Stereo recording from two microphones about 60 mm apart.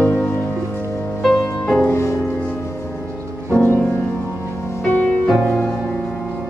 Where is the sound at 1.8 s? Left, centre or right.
Left.